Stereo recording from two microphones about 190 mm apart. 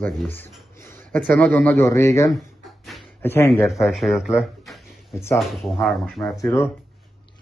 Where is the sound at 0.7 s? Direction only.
15° left (ahead or behind).